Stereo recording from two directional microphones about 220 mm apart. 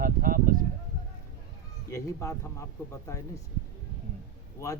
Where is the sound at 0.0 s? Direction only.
40° right (ahead or behind).